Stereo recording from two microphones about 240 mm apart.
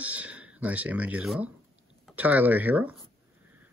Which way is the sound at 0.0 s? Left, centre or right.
Centre.